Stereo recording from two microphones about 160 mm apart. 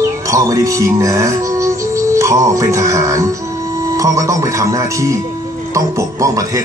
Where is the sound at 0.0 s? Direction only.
20° right (ahead or behind).